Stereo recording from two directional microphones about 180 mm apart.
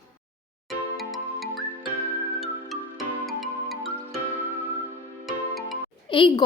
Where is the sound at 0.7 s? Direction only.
Centre (ahead or behind).